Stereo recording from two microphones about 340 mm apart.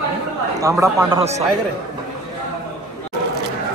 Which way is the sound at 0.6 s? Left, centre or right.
Centre.